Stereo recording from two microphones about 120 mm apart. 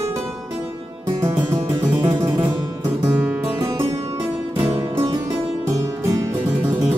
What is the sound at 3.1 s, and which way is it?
Music, 10° right (ahead or behind).